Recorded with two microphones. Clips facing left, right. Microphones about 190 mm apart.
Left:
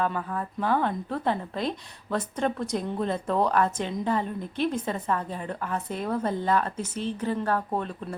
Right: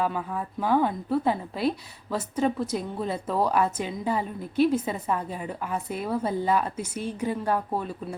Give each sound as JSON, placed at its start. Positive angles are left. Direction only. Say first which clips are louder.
{"t": 0.0, "sound": "a woman's voice", "louder": "even", "side_deg": -10}